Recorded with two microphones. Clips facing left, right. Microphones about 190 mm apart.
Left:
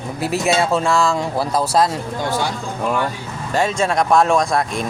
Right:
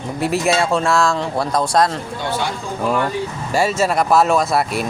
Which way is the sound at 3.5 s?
5° right (ahead or behind).